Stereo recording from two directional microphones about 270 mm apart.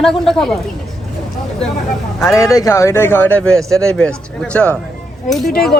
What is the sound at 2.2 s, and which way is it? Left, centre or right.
A man's voice, centre.